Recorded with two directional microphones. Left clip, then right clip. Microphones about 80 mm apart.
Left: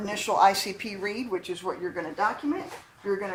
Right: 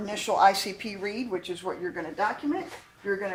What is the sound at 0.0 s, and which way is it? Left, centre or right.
Speech, right.